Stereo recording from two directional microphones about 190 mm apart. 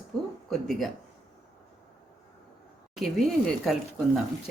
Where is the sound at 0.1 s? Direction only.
5° left (ahead or behind).